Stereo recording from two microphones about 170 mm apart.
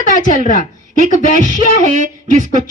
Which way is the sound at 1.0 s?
50° left (ahead or behind).